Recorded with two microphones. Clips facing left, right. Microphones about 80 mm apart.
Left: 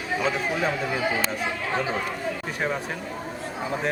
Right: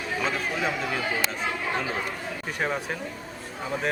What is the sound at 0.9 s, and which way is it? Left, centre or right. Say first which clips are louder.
Speech: left 3 dB; centre.